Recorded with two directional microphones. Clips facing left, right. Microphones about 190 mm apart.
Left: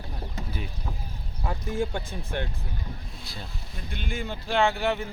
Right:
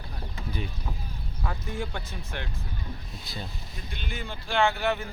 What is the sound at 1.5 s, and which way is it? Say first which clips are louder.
Speech: left 5 dB; 25° left (ahead or behind).